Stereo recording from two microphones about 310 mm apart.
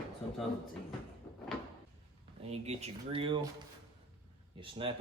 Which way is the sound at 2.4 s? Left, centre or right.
Centre.